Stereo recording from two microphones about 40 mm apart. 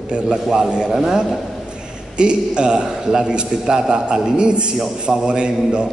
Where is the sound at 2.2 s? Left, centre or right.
Right.